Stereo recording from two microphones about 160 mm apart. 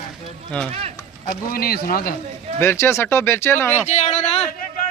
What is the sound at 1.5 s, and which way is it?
Speech, 70° left (ahead or behind).